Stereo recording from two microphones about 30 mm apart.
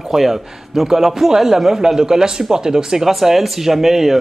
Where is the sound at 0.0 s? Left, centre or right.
Centre.